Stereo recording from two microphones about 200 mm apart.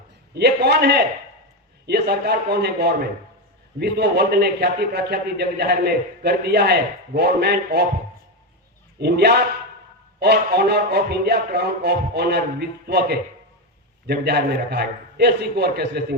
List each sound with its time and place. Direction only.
0.3 s a man's voice: 55° right (ahead or behind)
9.0 s a man's voice: 55° right (ahead or behind)